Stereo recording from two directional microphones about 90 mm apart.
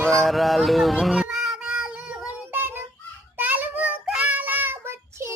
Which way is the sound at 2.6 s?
25° right (ahead or behind).